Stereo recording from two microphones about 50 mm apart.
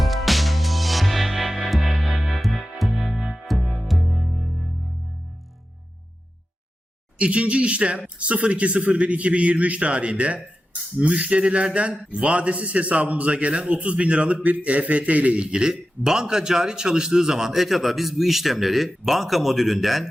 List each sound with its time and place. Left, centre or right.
0.0 s music: centre
3.2 s music: centre
3.4 s music: centre
7.2 s a man's voice: right; by 20.1 s centre